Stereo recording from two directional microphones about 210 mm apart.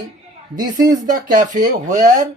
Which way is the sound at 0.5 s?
20° right (ahead or behind).